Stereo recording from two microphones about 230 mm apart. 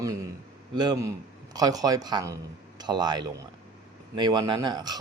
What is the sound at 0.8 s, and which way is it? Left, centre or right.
A man's voice, centre.